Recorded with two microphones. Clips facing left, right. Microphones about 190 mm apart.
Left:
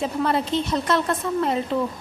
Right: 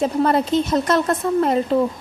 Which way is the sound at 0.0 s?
45° right (ahead or behind).